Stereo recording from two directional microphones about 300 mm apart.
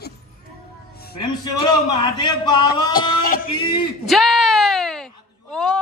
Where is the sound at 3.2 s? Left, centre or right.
Left.